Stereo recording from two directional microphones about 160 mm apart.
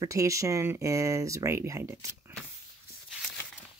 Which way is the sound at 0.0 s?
20° right (ahead or behind).